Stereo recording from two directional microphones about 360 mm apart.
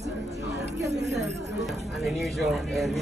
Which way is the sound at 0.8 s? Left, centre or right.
Right.